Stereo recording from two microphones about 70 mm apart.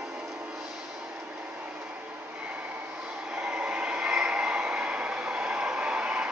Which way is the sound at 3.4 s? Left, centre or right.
Centre.